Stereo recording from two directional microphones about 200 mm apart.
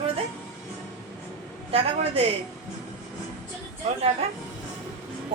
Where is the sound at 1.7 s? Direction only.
30° right (ahead or behind).